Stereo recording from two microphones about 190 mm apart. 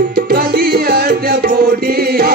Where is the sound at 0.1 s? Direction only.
55° right (ahead or behind).